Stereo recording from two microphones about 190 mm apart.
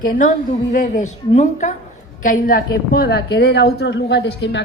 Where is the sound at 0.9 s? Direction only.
35° left (ahead or behind).